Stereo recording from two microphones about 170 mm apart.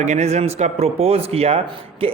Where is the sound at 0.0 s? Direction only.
40° right (ahead or behind).